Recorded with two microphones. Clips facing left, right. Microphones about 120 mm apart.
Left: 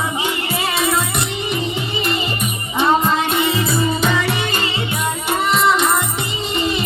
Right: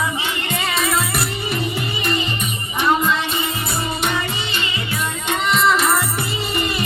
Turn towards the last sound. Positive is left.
turn(degrees=0)  # may be behind; listen again after turning